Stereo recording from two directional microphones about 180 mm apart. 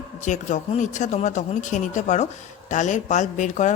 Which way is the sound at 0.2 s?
40° left (ahead or behind).